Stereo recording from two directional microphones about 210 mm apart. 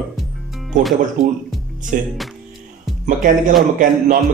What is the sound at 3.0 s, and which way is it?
Speech, 35° right (ahead or behind).